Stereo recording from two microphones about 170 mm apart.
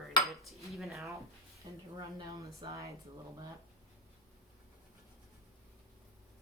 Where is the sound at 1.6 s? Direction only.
20° right (ahead or behind).